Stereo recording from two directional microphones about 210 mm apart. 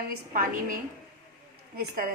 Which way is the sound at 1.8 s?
45° right (ahead or behind).